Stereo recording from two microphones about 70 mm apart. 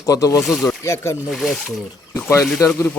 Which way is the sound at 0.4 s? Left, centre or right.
Centre.